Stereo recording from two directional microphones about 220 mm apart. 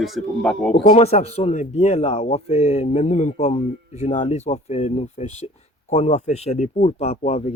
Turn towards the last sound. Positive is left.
turn(degrees=30)  # may be behind; listen again after turning